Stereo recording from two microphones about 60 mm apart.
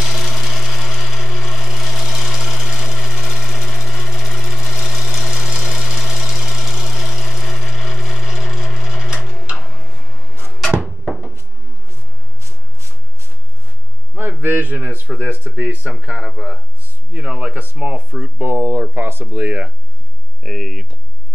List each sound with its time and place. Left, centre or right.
0.0 s wood: centre
4.1 s sewing machine: centre
5.3 s engine: centre
8.8 s sewing machine: centre
9.6 s tick-tock: centre
14.1 s a sound: right
15.0 s speech: right; by 16.5 s centre
17.1 s speech: right
20.4 s speech: centre